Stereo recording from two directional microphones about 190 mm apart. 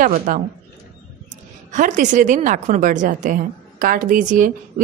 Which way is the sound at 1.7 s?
40° right (ahead or behind).